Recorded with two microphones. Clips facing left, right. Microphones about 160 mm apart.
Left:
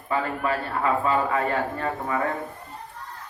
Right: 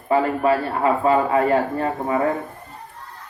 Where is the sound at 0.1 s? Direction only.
30° right (ahead or behind).